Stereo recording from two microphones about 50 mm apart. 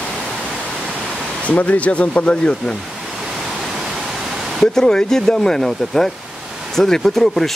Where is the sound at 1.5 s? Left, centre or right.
Left.